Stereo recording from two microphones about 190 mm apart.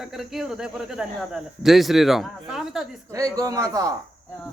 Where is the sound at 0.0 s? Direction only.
Centre (ahead or behind).